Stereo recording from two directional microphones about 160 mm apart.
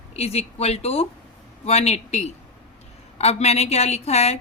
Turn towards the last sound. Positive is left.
turn(degrees=40)  # may be behind; listen again after turning